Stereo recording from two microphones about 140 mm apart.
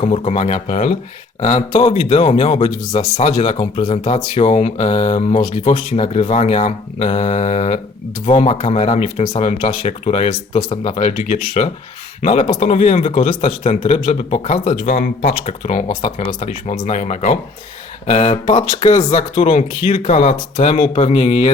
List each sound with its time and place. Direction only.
0.0 s a man's voice: 50° left (ahead or behind)
1.8 s a man's voice: 45° left (ahead or behind)
12.2 s speech: 40° left (ahead or behind)
12.6 s a man's voice: 50° left (ahead or behind)
14.9 s speech: 90° left
15.6 s a man's voice: 55° left (ahead or behind)
15.9 s speech: 35° left (ahead or behind)
16.5 s a man's voice: 60° left (ahead or behind)
20.8 s a man's voice: 45° left (ahead or behind)